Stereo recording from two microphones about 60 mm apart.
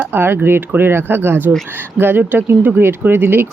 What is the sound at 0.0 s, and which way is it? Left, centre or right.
Speech, right.